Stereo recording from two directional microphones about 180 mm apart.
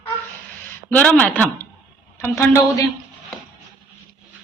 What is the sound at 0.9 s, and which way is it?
A woman's voice, 10° left (ahead or behind).